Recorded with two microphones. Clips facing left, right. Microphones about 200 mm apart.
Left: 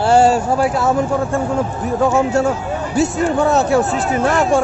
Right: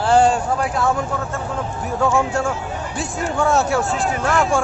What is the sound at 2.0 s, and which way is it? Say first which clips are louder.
Speech: left 4 dB; 20° left (ahead or behind).